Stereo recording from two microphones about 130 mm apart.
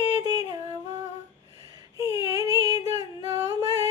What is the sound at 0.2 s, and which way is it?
Yodeling, 30° right (ahead or behind).